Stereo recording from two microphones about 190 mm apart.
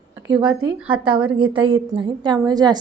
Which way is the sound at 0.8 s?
5° right (ahead or behind).